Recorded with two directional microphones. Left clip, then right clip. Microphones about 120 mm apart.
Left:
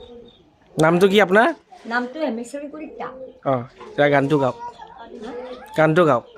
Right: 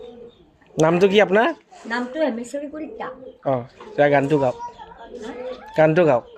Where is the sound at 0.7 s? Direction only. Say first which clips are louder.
Even; 40° left (ahead or behind).